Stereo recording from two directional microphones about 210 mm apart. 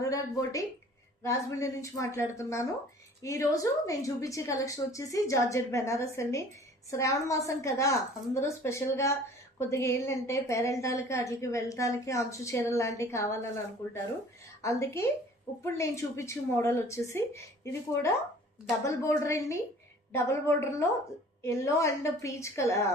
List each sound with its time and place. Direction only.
0.0 s a sound: 15° left (ahead or behind)
1.2 s a woman's voice: 15° left (ahead or behind)
14.6 s a woman's voice: 15° left (ahead or behind)